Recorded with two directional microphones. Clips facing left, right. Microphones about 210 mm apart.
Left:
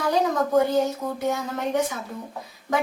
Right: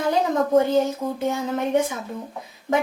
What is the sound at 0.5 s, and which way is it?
A woman's voice, 25° right (ahead or behind).